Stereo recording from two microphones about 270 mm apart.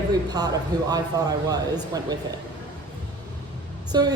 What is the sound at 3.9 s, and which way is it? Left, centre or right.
Speech, centre.